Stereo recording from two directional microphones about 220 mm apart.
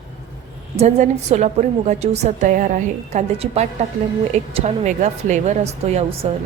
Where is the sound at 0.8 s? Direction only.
30° right (ahead or behind).